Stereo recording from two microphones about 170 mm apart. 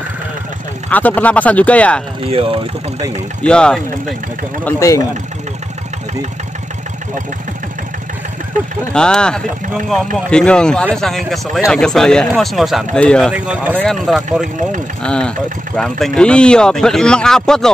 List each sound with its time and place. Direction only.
0.8 s speech: 10° left (ahead or behind)
2.2 s speech: 35° right (ahead or behind)
3.4 s speech: 5° left (ahead or behind)
4.6 s speech: 20° left (ahead or behind)
8.9 s speech: 5° left (ahead or behind)
13.3 s speech: 5° right (ahead or behind)